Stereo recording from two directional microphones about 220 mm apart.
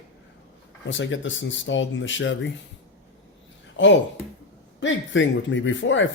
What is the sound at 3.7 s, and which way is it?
Speech, 55° left (ahead or behind).